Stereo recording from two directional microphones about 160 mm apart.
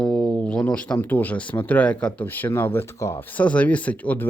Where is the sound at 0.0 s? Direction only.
5° left (ahead or behind).